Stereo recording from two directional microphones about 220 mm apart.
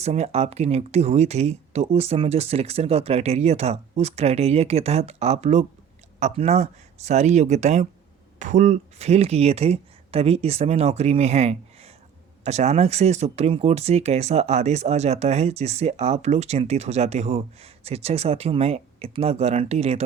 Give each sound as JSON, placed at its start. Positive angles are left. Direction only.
{"t": 0.0, "sound": "speech", "side_deg": -30}